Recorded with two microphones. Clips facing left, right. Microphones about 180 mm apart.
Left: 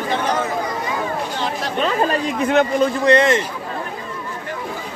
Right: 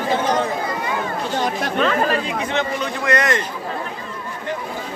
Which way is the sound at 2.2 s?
50° left (ahead or behind).